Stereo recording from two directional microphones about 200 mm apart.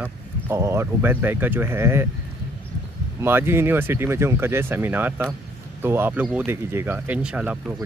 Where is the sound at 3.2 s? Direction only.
10° right (ahead or behind).